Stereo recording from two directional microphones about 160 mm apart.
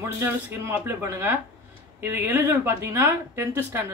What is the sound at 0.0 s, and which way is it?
Speech, 15° right (ahead or behind).